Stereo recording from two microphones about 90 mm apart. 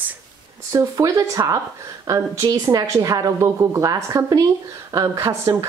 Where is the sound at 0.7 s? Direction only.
40° right (ahead or behind).